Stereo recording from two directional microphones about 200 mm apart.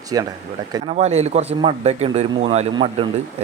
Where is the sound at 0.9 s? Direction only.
35° right (ahead or behind).